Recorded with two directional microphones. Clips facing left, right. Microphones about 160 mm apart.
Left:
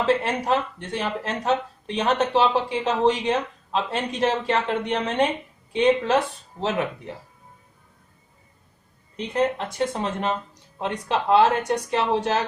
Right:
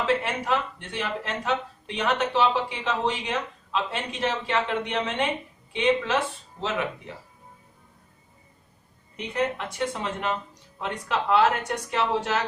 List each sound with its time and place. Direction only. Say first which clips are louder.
0.3 s speech: left 4 dB; 35° left (ahead or behind)
9.1 s speech: left 4 dB; 35° left (ahead or behind)